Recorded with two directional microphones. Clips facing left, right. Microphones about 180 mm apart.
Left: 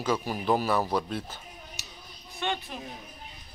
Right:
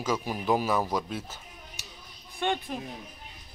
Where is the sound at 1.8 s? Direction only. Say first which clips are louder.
Even; 50° right (ahead or behind).